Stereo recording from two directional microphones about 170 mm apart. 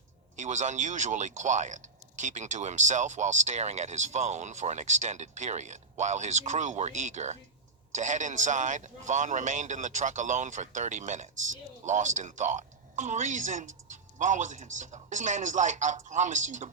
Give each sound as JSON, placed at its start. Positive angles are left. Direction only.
{"t": 0.3, "sound": "speech", "side_deg": -45}